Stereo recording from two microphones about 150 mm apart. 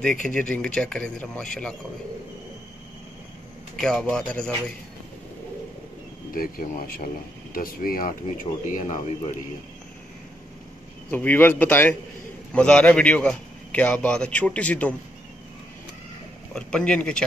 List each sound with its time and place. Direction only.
0.0 s speech: 5° left (ahead or behind)
3.8 s speech: 5° left (ahead or behind)
6.3 s speech: 70° left (ahead or behind)
11.1 s a man's voice: 10° left (ahead or behind)
16.5 s speech: 5° left (ahead or behind)